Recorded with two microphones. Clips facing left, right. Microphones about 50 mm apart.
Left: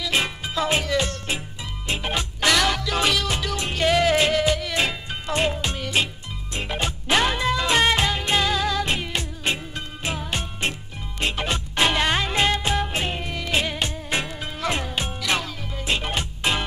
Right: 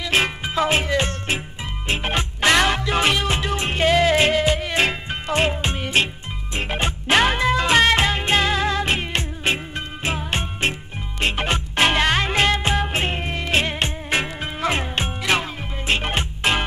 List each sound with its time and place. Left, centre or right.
0.0 s music: right
3.8 s music: centre
4.1 s music: right